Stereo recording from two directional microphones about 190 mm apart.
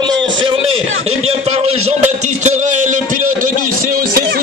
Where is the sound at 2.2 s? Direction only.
40° right (ahead or behind).